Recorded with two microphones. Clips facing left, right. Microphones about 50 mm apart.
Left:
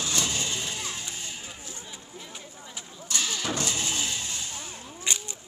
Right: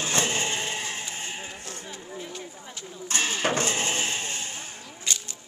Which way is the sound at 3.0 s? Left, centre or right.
Right.